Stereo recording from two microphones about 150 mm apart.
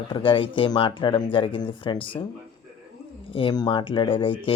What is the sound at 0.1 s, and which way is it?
Speech, 35° left (ahead or behind).